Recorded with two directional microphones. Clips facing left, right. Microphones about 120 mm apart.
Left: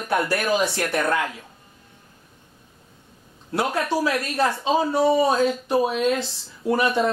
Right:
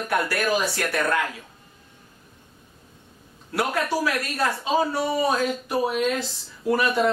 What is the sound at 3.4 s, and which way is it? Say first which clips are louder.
Speech: left 1 dB; 25° left (ahead or behind).